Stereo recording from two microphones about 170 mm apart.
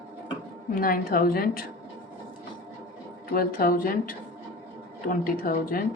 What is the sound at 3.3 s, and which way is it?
A woman's voice, 55° left (ahead or behind).